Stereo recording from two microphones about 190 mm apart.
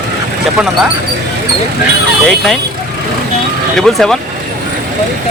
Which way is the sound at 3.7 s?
Centre (ahead or behind).